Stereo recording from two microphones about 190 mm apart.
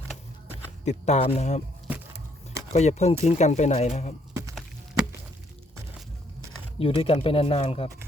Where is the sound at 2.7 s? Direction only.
35° left (ahead or behind).